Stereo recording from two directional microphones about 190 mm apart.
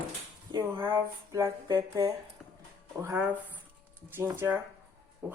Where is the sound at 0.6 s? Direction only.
10° right (ahead or behind).